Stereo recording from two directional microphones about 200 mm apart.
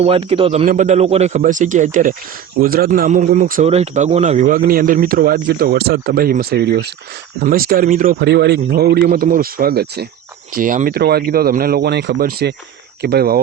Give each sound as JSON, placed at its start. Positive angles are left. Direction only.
{"t": 0.0, "sound": "a man's voice", "side_deg": -30}